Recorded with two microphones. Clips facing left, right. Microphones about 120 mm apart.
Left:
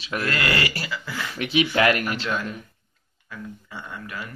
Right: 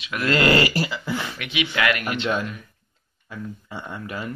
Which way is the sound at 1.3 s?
35° left (ahead or behind).